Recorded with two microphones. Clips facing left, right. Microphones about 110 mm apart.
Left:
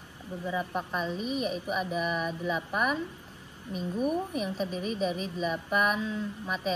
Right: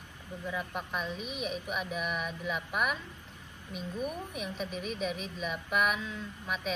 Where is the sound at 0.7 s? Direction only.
Centre (ahead or behind).